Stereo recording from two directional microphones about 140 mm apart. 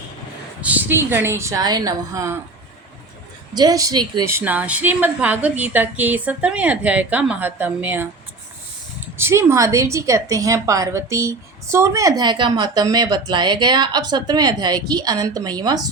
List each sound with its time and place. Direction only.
0.6 s a woman's voice: 10° right (ahead or behind)
3.5 s a woman's voice: 30° right (ahead or behind)
4.3 s a woman's voice: 15° right (ahead or behind)
9.1 s a woman's voice: 15° right (ahead or behind)